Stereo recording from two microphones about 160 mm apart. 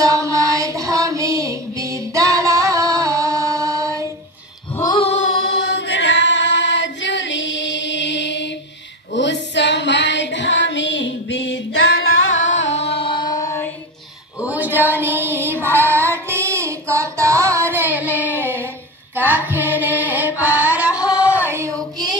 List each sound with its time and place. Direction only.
0.0 s music: 20° right (ahead or behind)
4.7 s a sound: 25° left (ahead or behind)
5.1 s choir: 90° left
9.1 s female singing: 90° left
12.7 s music: 40° left (ahead or behind); by 13.7 s 20° left (ahead or behind)
14.4 s music: 10° right (ahead or behind)
16.0 s child singing: 15° right (ahead or behind)
19.1 s music: 10° right (ahead or behind)